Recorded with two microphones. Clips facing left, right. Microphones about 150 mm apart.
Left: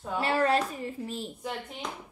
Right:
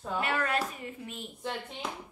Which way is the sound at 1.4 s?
Centre (ahead or behind).